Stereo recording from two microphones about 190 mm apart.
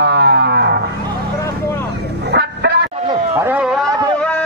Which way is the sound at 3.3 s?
10° right (ahead or behind).